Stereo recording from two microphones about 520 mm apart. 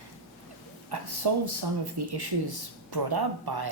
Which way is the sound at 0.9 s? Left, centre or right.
Right.